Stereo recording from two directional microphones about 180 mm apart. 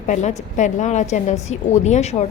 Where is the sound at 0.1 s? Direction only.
40° left (ahead or behind).